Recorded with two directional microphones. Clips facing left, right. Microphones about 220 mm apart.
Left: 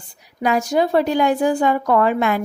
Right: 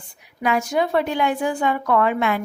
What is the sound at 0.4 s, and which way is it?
A woman's voice, 40° left (ahead or behind).